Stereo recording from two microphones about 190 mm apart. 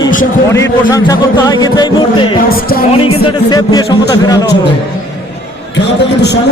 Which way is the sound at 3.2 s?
20° left (ahead or behind).